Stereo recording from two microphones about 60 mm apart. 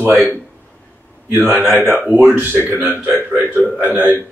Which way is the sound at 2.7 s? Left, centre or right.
Right.